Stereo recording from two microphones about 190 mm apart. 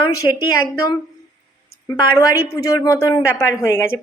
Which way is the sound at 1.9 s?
15° left (ahead or behind).